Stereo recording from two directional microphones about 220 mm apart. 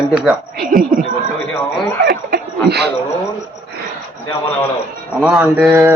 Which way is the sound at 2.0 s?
45° right (ahead or behind).